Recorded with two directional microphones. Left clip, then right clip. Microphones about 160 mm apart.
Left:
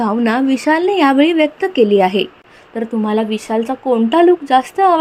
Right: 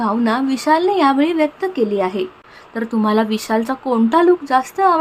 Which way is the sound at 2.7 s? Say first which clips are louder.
Even; centre (ahead or behind).